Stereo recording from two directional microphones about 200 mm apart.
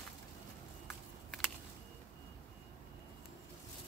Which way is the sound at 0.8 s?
5° left (ahead or behind).